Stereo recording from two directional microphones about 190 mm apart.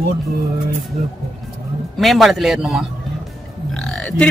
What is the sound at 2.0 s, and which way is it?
A man's voice, centre (ahead or behind).